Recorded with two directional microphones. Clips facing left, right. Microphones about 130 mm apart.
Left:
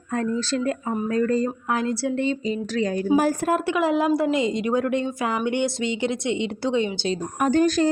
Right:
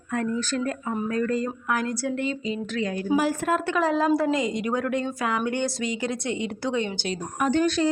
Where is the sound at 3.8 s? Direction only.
25° left (ahead or behind).